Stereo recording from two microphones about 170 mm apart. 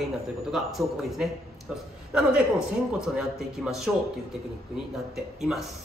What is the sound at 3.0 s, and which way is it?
Speech, 5° right (ahead or behind).